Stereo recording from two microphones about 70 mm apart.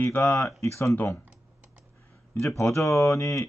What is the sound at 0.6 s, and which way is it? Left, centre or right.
Speech, left.